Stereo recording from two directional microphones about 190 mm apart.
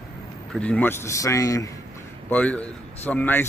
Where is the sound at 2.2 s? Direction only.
5° left (ahead or behind).